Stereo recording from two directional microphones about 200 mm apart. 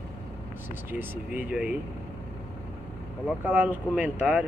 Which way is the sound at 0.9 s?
10° right (ahead or behind).